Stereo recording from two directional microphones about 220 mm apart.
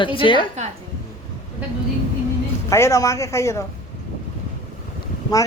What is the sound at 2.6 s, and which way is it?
A woman's voice, 15° left (ahead or behind).